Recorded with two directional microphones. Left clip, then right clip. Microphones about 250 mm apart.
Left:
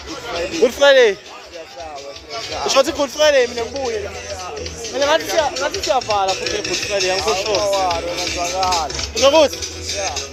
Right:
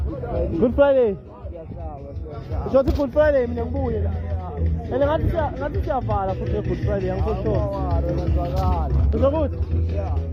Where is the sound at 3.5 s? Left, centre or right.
Centre.